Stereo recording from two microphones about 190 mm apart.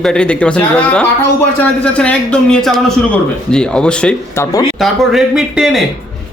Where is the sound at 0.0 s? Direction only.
5° left (ahead or behind).